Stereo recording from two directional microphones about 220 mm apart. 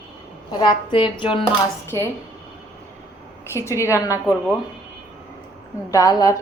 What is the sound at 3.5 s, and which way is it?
Speech, 10° left (ahead or behind).